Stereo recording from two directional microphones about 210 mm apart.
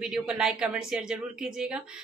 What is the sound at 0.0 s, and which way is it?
A woman's voice, 5° right (ahead or behind).